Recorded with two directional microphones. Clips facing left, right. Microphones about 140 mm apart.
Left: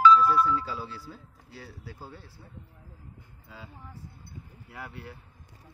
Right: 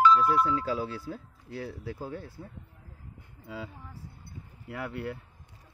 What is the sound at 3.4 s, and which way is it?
Speech, 70° right (ahead or behind).